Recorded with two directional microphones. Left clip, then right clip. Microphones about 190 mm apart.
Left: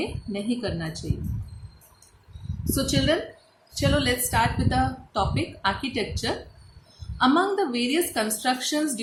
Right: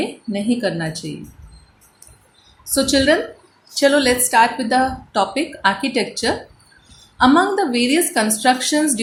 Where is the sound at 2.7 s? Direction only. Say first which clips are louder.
Right 9 dB; 20° right (ahead or behind).